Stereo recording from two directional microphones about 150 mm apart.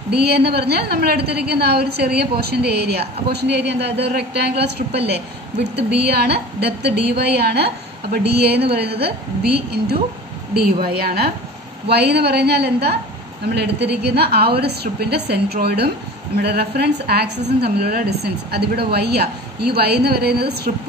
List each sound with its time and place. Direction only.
0.1 s a woman's voice: 90° right
6.0 s a woman's voice: 90° right